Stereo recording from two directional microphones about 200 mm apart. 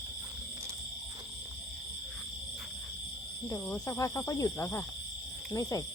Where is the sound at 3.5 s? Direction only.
5° left (ahead or behind).